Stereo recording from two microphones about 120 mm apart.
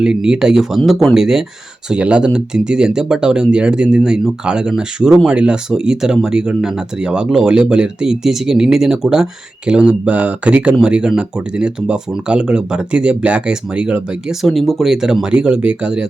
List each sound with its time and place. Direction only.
0.0 s speech: 5° right (ahead or behind)
14.4 s speech: 5° left (ahead or behind)